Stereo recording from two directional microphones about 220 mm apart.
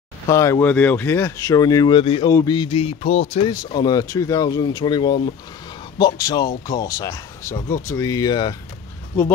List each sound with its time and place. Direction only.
0.3 s speech: 15° left (ahead or behind)